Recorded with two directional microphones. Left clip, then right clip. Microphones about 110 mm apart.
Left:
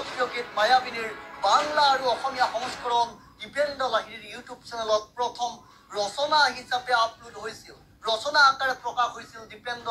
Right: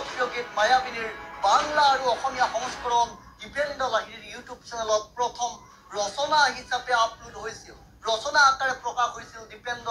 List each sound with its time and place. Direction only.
0.0 s speech: 30° left (ahead or behind)